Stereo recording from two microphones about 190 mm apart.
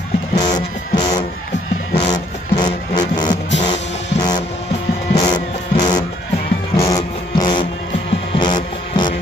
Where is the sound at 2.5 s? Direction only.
20° left (ahead or behind).